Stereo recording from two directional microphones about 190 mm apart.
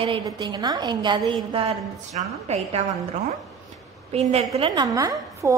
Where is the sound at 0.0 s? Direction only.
25° right (ahead or behind).